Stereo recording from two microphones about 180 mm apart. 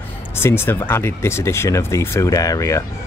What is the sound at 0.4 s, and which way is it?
Speech, 15° left (ahead or behind).